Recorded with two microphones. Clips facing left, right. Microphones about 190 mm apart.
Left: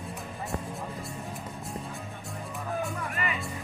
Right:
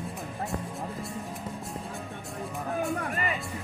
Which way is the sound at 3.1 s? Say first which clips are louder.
Right 2 dB; 35° right (ahead or behind).